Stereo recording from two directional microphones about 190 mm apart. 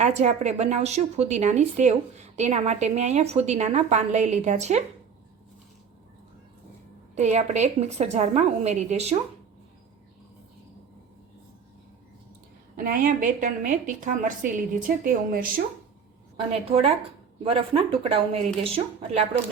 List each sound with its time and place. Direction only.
0.0 s a woman's voice: 35° right (ahead or behind)
7.2 s a woman's voice: 35° right (ahead or behind)
12.7 s a woman's voice: 50° right (ahead or behind)
16.5 s a woman's voice: 30° right (ahead or behind)